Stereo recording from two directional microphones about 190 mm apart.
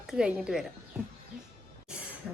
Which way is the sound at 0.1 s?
5° right (ahead or behind).